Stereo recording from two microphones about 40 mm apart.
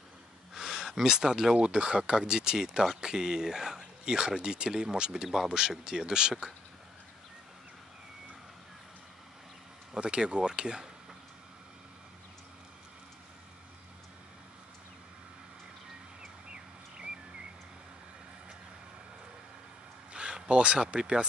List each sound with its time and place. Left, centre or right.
0.6 s speech: centre
9.9 s speech: right
16.4 s bird: right
20.1 s a sound: right
21.0 s speech: right